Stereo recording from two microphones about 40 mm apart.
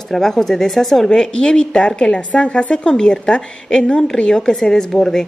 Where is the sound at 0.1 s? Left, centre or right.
Centre.